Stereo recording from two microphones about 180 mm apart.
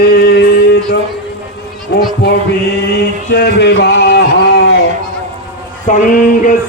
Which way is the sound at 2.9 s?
70° left (ahead or behind).